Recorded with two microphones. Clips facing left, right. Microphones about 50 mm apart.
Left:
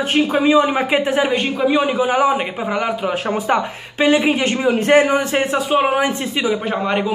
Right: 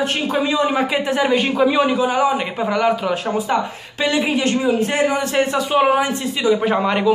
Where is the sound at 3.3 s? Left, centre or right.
Left.